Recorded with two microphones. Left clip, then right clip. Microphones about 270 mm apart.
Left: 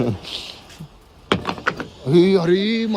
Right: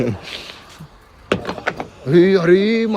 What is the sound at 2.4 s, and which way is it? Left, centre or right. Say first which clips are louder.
Speech: right 5 dB; centre.